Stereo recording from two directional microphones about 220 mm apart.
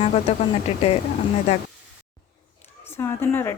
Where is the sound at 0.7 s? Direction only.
30° left (ahead or behind).